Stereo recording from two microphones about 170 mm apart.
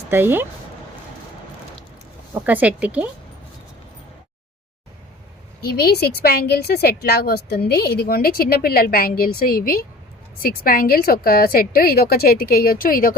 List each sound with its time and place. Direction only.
0.1 s a woman's voice: 10° right (ahead or behind)
2.3 s a woman's voice: 10° right (ahead or behind)
5.6 s a woman's voice: 65° left (ahead or behind)